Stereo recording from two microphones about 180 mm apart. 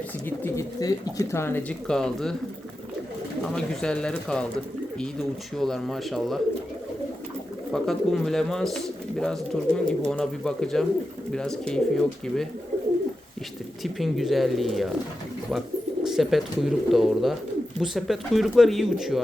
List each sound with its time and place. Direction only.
0.3 s speech: 15° left (ahead or behind)
3.4 s speech: 5° left (ahead or behind)
5.5 s speech: centre (ahead or behind)
7.7 s speech: centre (ahead or behind)
13.8 s speech: centre (ahead or behind)
16.0 s speech: centre (ahead or behind)